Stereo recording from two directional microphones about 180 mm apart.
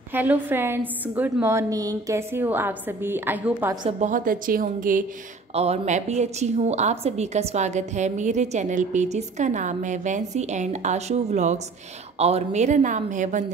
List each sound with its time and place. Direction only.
0.1 s a woman's voice: 10° right (ahead or behind)
4.0 s a woman's voice: 45° right (ahead or behind)
5.5 s a woman's voice: 35° right (ahead or behind)